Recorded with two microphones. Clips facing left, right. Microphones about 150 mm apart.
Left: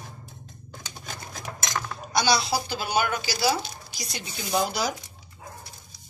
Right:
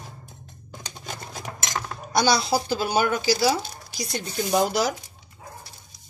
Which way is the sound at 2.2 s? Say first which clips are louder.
Right 3 dB; 45° right (ahead or behind).